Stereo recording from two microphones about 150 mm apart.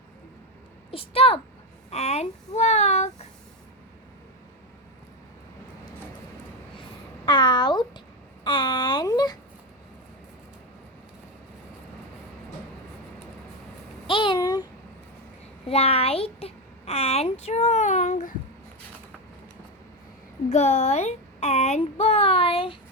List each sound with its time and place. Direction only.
0.9 s a woman's voice: 40° left (ahead or behind)
7.3 s speech: 30° left (ahead or behind)
8.4 s babbling: 30° left (ahead or behind)
14.1 s a sound: 35° left (ahead or behind)
15.6 s a child's voice: 40° left (ahead or behind)
20.5 s a child's voice: 50° left (ahead or behind)